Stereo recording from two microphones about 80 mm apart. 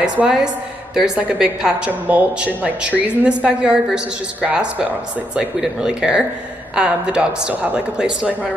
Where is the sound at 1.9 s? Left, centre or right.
Centre.